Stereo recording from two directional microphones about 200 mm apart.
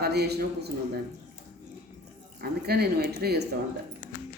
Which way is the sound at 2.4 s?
50° right (ahead or behind).